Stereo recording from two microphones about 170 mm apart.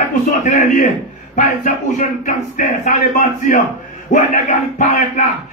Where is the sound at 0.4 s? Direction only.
50° left (ahead or behind).